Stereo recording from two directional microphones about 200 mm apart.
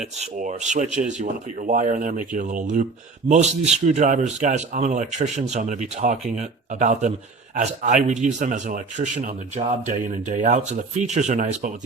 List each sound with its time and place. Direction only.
0.0 s speech: 35° right (ahead or behind)